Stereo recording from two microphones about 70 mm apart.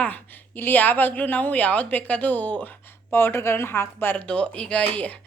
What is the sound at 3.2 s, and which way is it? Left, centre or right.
Speech, left.